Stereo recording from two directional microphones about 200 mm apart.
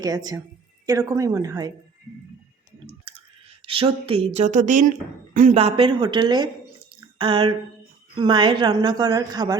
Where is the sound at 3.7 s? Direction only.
25° right (ahead or behind).